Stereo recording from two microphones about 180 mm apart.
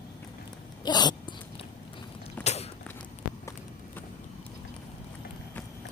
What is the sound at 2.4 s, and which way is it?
Creak, 35° left (ahead or behind).